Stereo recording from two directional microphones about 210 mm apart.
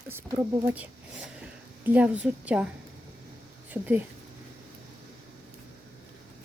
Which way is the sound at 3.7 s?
10° right (ahead or behind).